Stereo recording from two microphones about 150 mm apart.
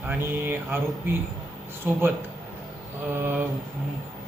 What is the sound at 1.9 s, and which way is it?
Speech, 15° right (ahead or behind).